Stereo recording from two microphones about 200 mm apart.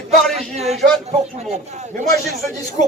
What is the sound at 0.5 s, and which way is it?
Speech, 35° right (ahead or behind).